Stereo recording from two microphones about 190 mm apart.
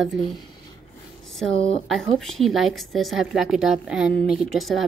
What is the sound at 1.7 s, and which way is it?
A woman's voice, centre (ahead or behind).